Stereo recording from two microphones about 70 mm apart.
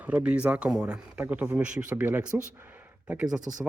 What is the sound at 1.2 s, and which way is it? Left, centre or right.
Speech, right.